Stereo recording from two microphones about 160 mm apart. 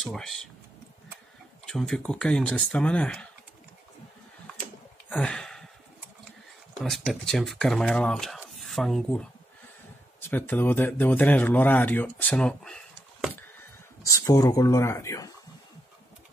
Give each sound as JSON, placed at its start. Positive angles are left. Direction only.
{"t": 0.1, "sound": "speech", "side_deg": 5}
{"t": 1.7, "sound": "speech", "side_deg": 5}
{"t": 5.1, "sound": "a sound", "side_deg": 5}
{"t": 6.8, "sound": "speech", "side_deg": 0}
{"t": 10.3, "sound": "speech", "side_deg": 10}
{"t": 14.0, "sound": "speech", "side_deg": 20}